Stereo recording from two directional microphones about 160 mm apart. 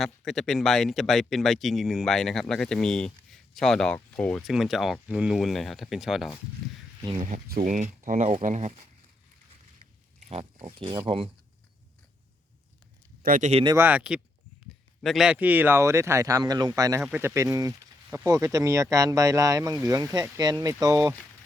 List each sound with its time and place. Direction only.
0.0 s speech: centre (ahead or behind)
7.0 s speech: 30° right (ahead or behind)
7.4 s speech: 65° right (ahead or behind); by 8.8 s 45° right (ahead or behind)
10.2 s pig: 45° right (ahead or behind)
10.8 s speech: 30° right (ahead or behind)
13.2 s speech: 60° right (ahead or behind)
13.5 s speech: 35° right (ahead or behind)
13.7 s speech: 10° right (ahead or behind)